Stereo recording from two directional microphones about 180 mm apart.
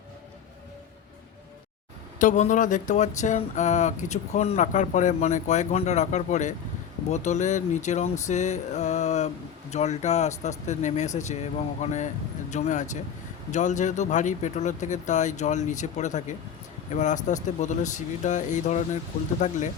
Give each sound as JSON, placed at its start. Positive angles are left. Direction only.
{"t": 2.1, "sound": "speech", "side_deg": 45}